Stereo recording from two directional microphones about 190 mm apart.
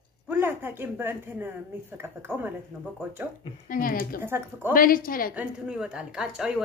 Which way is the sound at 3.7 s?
45° left (ahead or behind).